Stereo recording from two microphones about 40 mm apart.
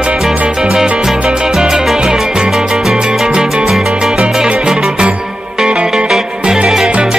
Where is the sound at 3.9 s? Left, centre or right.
Right.